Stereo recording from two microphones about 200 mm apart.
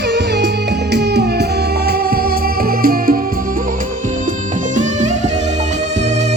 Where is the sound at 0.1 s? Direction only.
60° right (ahead or behind).